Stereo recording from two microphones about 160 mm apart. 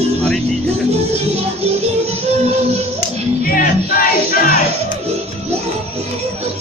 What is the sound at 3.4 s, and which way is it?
Music, 60° left (ahead or behind).